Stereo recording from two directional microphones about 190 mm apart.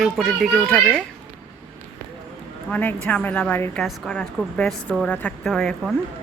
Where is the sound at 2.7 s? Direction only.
10° left (ahead or behind).